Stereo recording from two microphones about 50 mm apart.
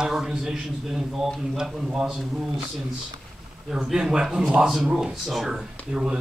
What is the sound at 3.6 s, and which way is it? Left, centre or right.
A man's voice, centre.